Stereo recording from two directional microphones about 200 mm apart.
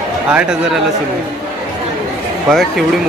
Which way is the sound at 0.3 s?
5° right (ahead or behind).